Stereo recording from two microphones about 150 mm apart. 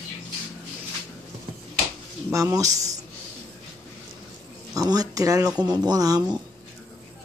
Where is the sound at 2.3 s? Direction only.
20° right (ahead or behind).